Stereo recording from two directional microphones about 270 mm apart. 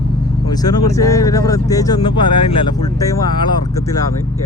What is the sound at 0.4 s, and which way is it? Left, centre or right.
Speech, centre.